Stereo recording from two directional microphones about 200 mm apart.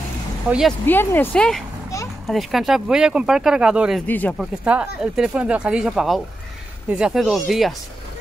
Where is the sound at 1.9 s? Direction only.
15° left (ahead or behind).